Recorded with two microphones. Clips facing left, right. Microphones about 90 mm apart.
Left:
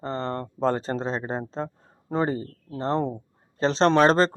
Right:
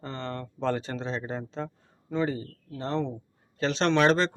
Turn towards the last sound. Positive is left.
turn(degrees=40)  # may be behind; listen again after turning